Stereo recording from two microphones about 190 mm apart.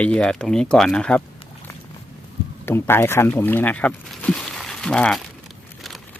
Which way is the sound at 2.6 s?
15° left (ahead or behind).